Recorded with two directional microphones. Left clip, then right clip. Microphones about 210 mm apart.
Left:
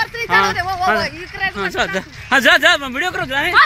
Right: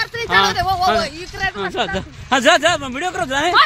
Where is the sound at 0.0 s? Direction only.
55° right (ahead or behind).